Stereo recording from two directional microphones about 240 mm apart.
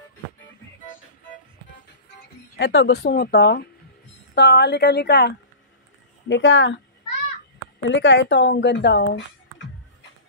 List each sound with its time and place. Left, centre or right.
2.5 s speech: left
7.8 s speech: left